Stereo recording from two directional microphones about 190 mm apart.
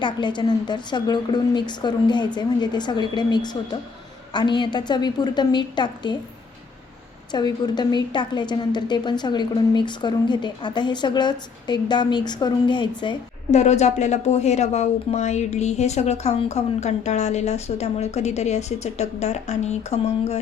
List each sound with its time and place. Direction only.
0.0 s a woman's voice: 25° left (ahead or behind)
7.3 s a woman's voice: 20° left (ahead or behind)
13.5 s speech: 35° left (ahead or behind)